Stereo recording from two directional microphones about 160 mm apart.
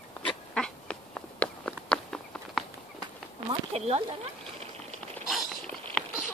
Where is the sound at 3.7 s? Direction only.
40° right (ahead or behind).